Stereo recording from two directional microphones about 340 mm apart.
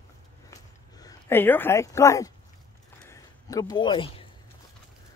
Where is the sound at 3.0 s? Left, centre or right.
Centre.